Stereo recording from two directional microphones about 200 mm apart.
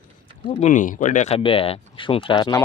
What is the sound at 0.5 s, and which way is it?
Speech, 35° left (ahead or behind).